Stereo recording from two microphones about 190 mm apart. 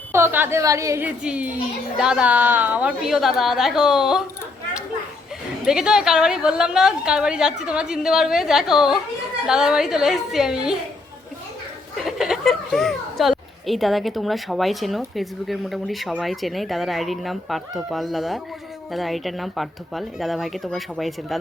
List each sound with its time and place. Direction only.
0.1 s a woman's voice: 10° right (ahead or behind)
5.6 s a child's voice: 5° right (ahead or behind)
12.0 s a child's voice: centre (ahead or behind)